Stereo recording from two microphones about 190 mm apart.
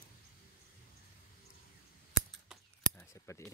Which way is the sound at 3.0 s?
15° left (ahead or behind).